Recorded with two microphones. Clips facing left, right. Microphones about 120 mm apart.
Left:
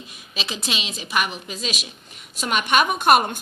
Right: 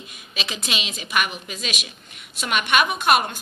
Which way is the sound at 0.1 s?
35° left (ahead or behind).